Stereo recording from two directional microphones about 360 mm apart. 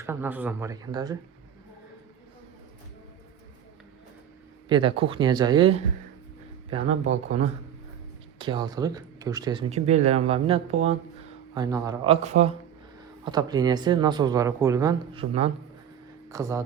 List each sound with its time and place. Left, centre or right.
0.0 s speech: centre
4.7 s speech: centre
7.1 s speech: centre